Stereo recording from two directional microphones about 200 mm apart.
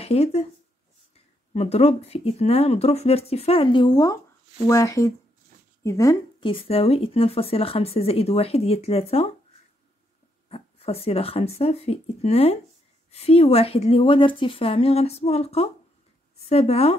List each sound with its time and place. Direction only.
0.0 s speech: 30° left (ahead or behind)
1.5 s speech: 30° left (ahead or behind)
10.5 s speech: 30° left (ahead or behind)